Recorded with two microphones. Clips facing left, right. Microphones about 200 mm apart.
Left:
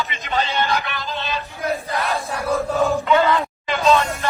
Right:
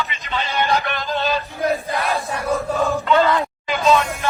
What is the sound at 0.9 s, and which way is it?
Music, 50° right (ahead or behind).